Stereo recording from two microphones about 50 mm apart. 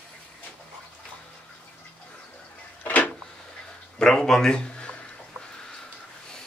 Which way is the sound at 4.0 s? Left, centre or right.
Centre.